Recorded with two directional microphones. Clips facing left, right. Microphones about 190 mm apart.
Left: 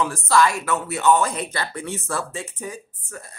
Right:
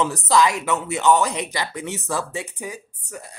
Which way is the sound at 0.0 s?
20° right (ahead or behind).